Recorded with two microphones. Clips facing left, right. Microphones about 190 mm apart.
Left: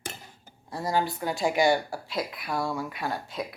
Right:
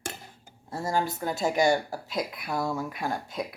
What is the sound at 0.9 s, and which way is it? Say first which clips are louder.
Speech: left 1 dB; 45° right (ahead or behind).